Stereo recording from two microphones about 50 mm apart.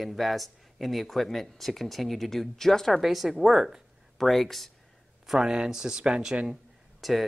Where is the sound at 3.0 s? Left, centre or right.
Centre.